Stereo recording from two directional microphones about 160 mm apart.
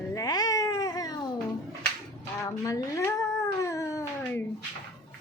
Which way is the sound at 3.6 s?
20° left (ahead or behind).